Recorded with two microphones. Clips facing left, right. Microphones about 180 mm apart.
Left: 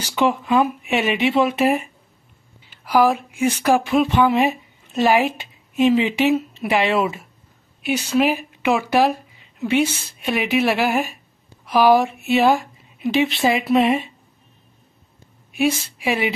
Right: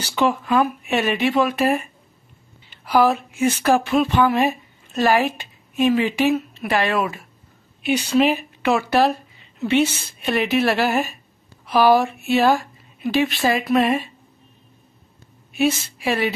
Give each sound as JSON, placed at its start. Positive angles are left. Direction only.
{"t": 0.0, "sound": "speech", "side_deg": 15}
{"t": 2.7, "sound": "speech", "side_deg": 10}
{"t": 7.8, "sound": "a woman's voice", "side_deg": 5}
{"t": 15.5, "sound": "a woman's voice", "side_deg": 10}